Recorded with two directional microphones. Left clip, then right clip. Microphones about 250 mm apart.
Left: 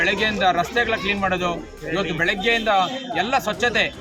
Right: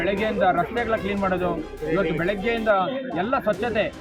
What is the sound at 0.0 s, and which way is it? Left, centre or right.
A man's voice, left.